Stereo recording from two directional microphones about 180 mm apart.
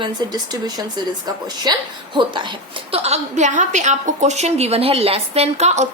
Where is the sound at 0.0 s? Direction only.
20° right (ahead or behind).